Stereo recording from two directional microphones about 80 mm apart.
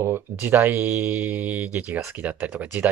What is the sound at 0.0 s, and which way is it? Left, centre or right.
Speech, right.